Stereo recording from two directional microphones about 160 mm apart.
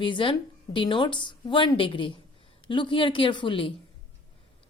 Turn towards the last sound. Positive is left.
turn(degrees=30)  # may be behind; listen again after turning